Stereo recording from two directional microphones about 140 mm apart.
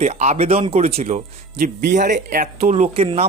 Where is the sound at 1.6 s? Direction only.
65° right (ahead or behind); by 3.3 s 45° right (ahead or behind).